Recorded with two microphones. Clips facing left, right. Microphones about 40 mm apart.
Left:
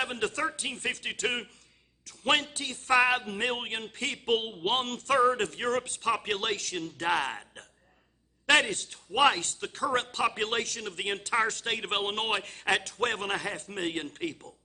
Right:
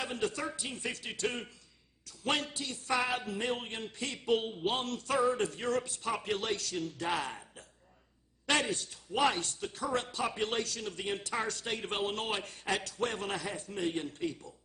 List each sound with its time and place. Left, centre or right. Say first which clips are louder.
0.0 s speech: left 5 dB; left